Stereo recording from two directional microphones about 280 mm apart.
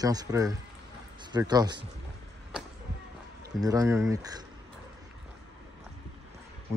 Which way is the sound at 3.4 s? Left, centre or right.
Centre.